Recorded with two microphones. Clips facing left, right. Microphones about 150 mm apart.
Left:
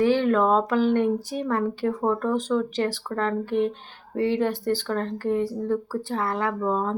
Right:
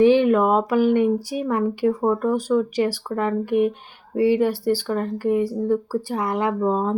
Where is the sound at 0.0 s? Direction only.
15° right (ahead or behind).